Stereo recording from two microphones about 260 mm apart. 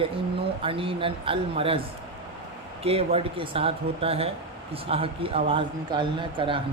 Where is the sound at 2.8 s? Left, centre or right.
Right.